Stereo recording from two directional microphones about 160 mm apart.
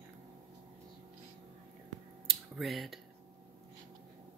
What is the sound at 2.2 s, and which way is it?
Finger snapping, centre (ahead or behind).